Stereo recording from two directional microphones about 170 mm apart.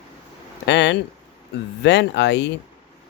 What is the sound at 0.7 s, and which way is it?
Speech, 90° left.